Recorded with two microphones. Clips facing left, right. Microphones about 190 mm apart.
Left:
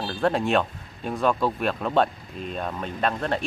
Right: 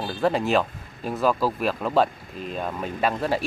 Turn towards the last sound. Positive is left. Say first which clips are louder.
# right 2 dB
turn(degrees=-5)  # may be behind; listen again after turning